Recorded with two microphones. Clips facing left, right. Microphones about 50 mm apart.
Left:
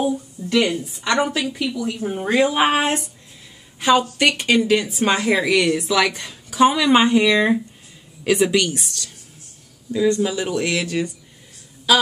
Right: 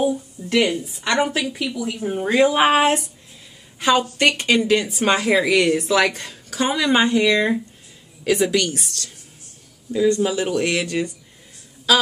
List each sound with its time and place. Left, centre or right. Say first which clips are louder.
0.0 s a sound: right 1 dB; centre
0.6 s speech: even; centre
3.8 s speech: left 1 dB; centre
6.5 s speech: left 4 dB; centre
10.2 s speech: right 1 dB; centre
10.8 s speech: even; centre